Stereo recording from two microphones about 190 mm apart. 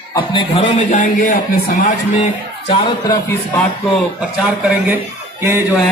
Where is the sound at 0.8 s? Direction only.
40° left (ahead or behind).